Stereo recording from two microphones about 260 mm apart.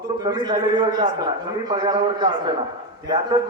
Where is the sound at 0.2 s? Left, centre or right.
Centre.